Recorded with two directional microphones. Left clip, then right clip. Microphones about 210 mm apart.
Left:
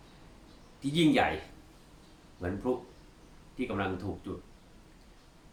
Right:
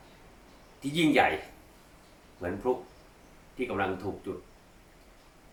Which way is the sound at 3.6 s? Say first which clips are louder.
Right 2 dB; 15° left (ahead or behind).